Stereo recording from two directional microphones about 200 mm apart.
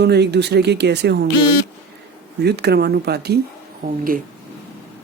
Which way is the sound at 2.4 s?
55° right (ahead or behind).